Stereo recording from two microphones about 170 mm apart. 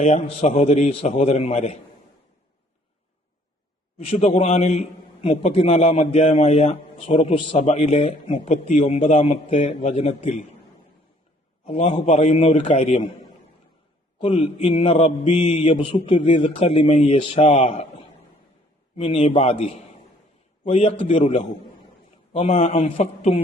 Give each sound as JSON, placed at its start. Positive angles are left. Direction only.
{"t": 0.0, "sound": "a man's voice", "side_deg": 40}
{"t": 3.9, "sound": "a man's voice", "side_deg": 35}
{"t": 11.6, "sound": "a man's voice", "side_deg": 35}
{"t": 14.2, "sound": "a man's voice", "side_deg": 30}